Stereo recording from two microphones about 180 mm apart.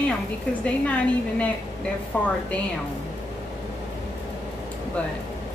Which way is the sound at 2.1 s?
10° left (ahead or behind).